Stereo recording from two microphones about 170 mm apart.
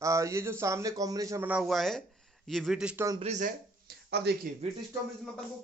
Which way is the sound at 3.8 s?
75° right (ahead or behind).